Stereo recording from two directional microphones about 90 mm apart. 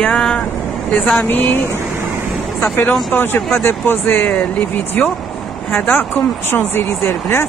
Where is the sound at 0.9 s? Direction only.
20° left (ahead or behind).